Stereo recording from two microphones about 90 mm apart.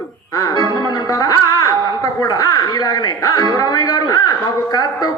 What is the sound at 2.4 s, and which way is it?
A man's voice, 40° left (ahead or behind).